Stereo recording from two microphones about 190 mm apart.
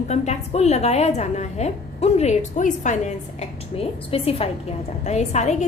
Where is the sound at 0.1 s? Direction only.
35° left (ahead or behind).